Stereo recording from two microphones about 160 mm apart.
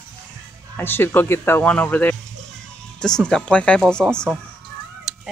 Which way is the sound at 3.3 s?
5° left (ahead or behind).